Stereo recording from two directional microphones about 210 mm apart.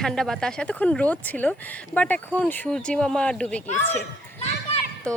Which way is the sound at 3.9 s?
30° left (ahead or behind).